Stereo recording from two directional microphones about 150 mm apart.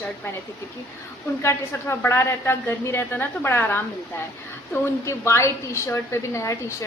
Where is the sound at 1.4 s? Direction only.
15° left (ahead or behind).